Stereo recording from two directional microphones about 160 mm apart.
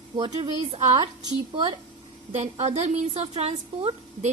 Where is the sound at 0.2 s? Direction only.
30° right (ahead or behind).